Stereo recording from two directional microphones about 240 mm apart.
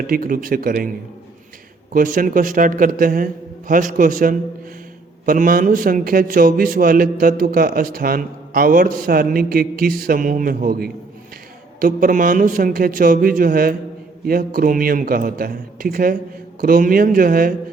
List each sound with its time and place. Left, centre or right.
0.1 s a man's voice: right
1.9 s a man's voice: right